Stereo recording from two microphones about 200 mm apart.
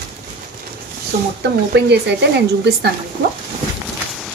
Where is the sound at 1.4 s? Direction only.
60° right (ahead or behind).